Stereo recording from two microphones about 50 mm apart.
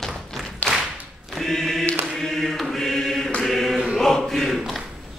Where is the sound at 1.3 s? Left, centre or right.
Centre.